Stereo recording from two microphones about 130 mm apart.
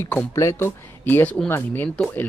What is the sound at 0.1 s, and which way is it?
Speech, 20° left (ahead or behind).